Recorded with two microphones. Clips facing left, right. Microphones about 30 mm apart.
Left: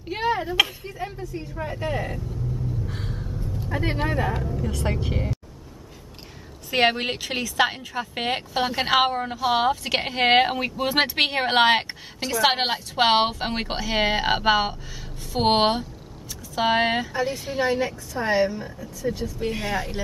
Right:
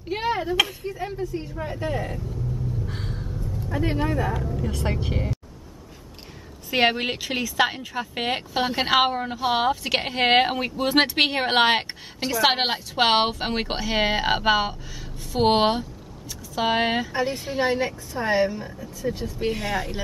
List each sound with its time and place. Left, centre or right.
0.0 s chop: centre
0.6 s a woman's voice: centre
1.2 s a woman's voice: centre
1.5 s a woman's voice: centre
2.9 s a sound: centre
3.7 s speech: centre
4.4 s a woman's voice: centre
6.7 s a woman's voice: centre
17.6 s a woman's voice: centre
18.2 s a woman's voice: centre
19.2 s speech: centre
19.5 s a woman's voice: centre